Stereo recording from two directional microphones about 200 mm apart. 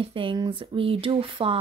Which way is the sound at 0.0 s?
25° right (ahead or behind).